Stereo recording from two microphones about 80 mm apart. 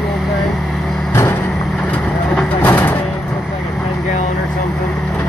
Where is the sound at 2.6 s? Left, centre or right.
Left.